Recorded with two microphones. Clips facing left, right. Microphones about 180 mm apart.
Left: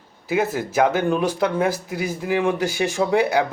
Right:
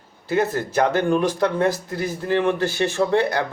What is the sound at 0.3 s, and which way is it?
Speech, 5° left (ahead or behind).